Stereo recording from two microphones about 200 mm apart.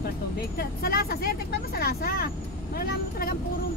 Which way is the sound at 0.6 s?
50° left (ahead or behind).